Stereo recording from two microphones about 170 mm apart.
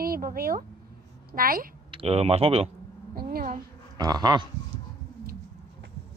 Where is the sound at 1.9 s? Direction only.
35° right (ahead or behind).